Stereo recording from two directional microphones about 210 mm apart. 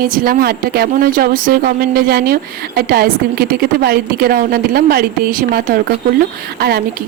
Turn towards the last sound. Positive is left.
turn(degrees=-50)  # may be behind; listen again after turning